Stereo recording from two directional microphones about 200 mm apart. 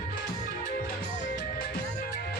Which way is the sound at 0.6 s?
40° left (ahead or behind).